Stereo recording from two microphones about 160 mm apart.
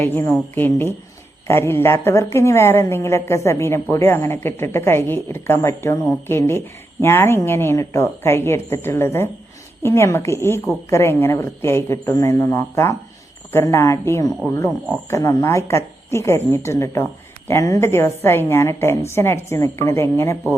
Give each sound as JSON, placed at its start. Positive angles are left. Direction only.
{"t": 0.0, "sound": "a woman's voice", "side_deg": 15}